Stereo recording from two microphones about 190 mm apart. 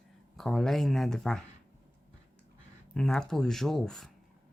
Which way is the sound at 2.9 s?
5° left (ahead or behind).